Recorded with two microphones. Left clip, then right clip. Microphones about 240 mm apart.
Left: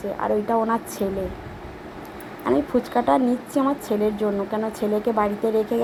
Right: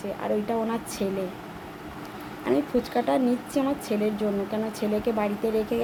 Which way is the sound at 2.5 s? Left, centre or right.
Centre.